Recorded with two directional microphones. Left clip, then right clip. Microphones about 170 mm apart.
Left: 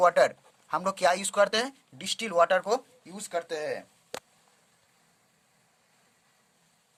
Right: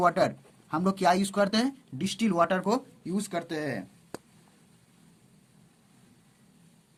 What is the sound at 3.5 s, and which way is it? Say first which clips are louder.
Speech: left 1 dB; 10° left (ahead or behind).